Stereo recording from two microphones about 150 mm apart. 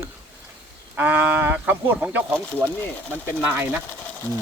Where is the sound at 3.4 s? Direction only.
10° right (ahead or behind).